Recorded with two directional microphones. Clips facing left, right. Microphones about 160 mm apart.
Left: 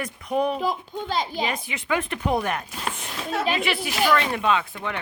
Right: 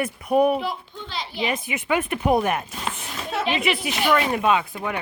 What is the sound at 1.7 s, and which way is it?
Speech, 20° right (ahead or behind).